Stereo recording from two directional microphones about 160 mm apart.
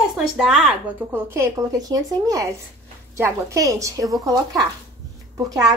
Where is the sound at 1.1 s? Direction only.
15° right (ahead or behind).